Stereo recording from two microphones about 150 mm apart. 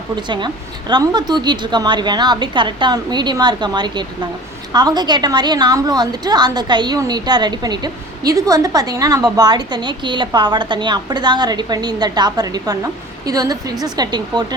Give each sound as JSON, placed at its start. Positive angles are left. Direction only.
{"t": 0.2, "sound": "a woman's voice", "side_deg": -30}